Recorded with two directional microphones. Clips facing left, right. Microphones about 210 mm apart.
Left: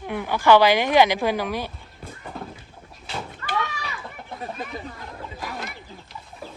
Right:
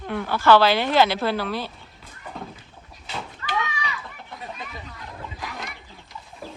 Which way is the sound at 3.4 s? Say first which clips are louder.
Right 1 dB; 50° left (ahead or behind).